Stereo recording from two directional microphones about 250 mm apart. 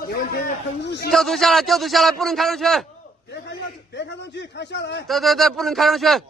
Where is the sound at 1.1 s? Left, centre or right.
Centre.